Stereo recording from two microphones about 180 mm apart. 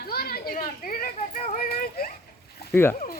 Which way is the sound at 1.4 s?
40° left (ahead or behind).